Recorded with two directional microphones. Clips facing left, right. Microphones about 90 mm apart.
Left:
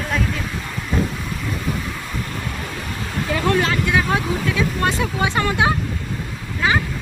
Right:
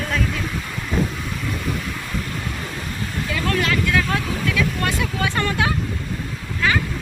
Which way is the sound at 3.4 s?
30° left (ahead or behind).